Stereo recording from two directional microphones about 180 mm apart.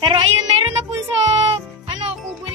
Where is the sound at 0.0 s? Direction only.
25° right (ahead or behind).